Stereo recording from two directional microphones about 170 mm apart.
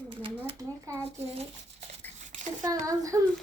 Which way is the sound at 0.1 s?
30° right (ahead or behind).